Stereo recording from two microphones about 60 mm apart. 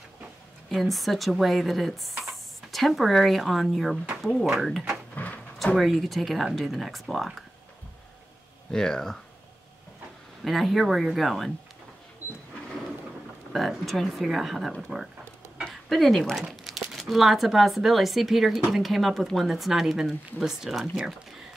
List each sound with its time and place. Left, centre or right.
0.7 s speech: centre
5.1 s a sound: left
5.8 s speech: centre
8.7 s speech: centre
10.4 s speech: centre
13.5 s speech: centre